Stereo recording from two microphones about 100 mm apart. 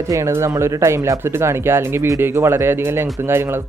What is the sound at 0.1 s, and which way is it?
Speech, 30° right (ahead or behind).